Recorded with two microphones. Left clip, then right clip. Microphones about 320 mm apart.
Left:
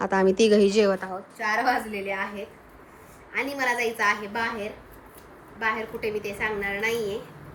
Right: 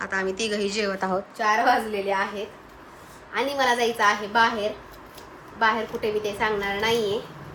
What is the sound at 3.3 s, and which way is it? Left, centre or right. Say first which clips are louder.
Speech: right 3 dB; centre.